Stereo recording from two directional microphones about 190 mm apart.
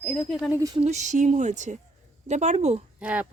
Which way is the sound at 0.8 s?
35° right (ahead or behind).